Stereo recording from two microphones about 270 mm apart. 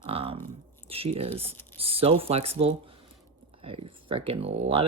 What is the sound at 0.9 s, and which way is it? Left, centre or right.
Speech, right.